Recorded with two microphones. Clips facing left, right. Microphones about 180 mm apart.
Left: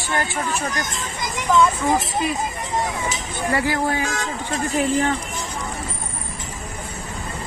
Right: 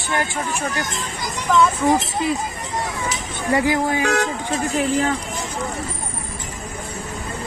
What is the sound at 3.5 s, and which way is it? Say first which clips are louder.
Speech: right 3 dB; 20° right (ahead or behind).